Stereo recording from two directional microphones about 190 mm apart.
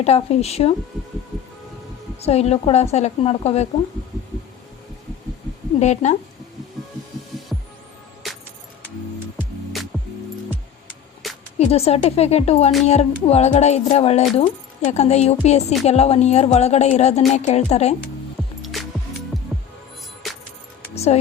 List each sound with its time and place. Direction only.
0.0 s speech: 35° left (ahead or behind)
2.2 s speech: 35° left (ahead or behind)
5.8 s speech: 35° left (ahead or behind)
11.5 s speech: 30° left (ahead or behind)
18.6 s music: centre (ahead or behind)
20.2 s music: centre (ahead or behind)
20.9 s music: 35° left (ahead or behind)